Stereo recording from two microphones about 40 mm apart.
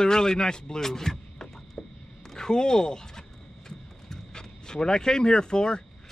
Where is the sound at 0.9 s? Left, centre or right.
Centre.